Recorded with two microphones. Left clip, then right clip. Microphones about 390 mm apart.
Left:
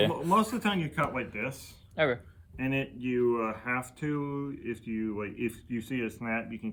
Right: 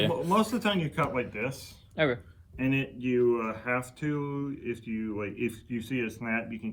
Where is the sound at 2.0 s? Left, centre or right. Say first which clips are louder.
Even; centre.